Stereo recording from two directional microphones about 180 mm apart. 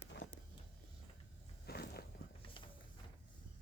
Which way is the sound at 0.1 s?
75° left (ahead or behind).